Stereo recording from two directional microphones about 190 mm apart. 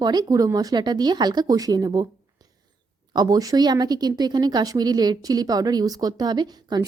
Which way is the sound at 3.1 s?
20° right (ahead or behind).